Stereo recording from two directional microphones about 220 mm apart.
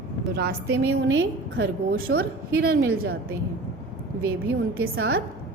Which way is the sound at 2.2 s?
45° right (ahead or behind).